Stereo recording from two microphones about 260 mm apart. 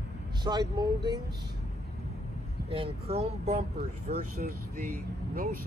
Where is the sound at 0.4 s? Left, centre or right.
Centre.